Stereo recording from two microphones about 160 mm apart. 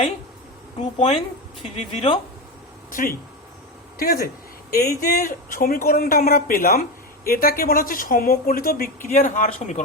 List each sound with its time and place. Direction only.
0.8 s speech: 40° left (ahead or behind)
2.9 s speech: 60° left (ahead or behind)